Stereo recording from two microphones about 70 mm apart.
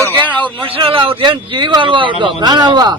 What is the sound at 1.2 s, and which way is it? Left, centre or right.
Speech, right.